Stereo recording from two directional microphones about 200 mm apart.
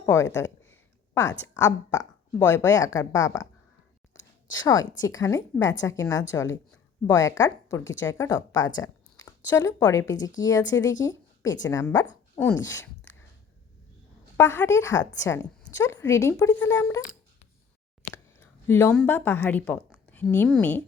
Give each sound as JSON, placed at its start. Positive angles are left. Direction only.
{"t": 0.0, "sound": "speech", "side_deg": 15}
{"t": 0.6, "sound": "a sound", "side_deg": 10}
{"t": 1.5, "sound": "speech", "side_deg": 15}
{"t": 4.9, "sound": "a woman's voice", "side_deg": 20}
{"t": 12.5, "sound": "speech", "side_deg": 65}
{"t": 14.3, "sound": "speech", "side_deg": 10}
{"t": 18.1, "sound": "a sound", "side_deg": 10}
{"t": 19.0, "sound": "speech", "side_deg": 10}